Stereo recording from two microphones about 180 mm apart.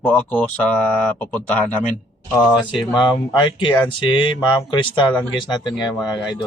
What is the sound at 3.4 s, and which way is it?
Speech, 25° left (ahead or behind).